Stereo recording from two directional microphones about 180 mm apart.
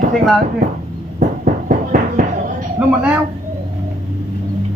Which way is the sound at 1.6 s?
50° right (ahead or behind).